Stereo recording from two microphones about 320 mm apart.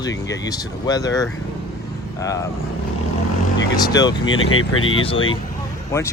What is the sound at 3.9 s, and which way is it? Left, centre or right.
Speech, centre.